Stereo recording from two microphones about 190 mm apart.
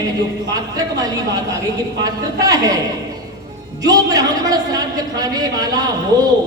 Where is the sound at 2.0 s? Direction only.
20° right (ahead or behind).